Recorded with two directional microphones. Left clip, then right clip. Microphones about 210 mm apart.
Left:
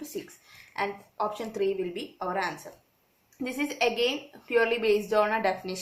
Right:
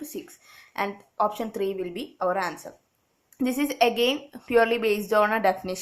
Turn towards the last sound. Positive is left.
turn(degrees=-40)  # may be behind; listen again after turning